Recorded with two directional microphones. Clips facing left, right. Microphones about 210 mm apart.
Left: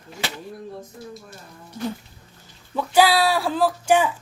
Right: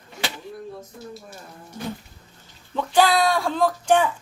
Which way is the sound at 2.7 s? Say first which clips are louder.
Left 1 dB; 10° left (ahead or behind).